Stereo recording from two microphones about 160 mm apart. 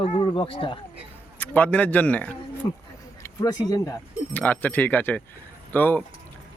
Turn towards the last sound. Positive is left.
turn(degrees=10)  # may be behind; listen again after turning